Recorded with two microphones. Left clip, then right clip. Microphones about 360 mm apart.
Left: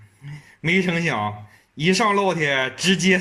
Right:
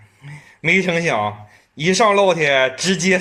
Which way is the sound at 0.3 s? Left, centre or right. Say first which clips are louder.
Right 5 dB; centre.